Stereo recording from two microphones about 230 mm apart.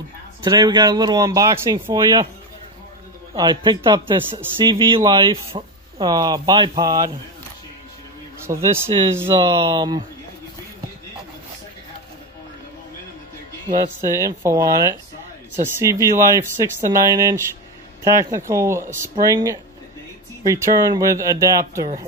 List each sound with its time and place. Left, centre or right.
0.4 s speech: centre
3.3 s a man's voice: centre
8.5 s speech: centre
13.7 s speech: centre